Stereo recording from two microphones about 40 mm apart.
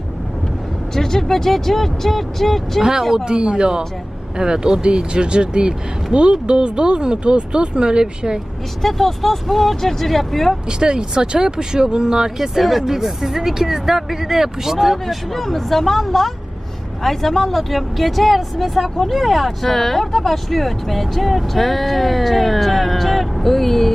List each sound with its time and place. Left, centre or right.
0.9 s speech: centre
2.8 s speech: centre
3.2 s speech: right
8.8 s speech: centre
10.7 s speech: centre
12.4 s speech: centre
15.0 s speech: centre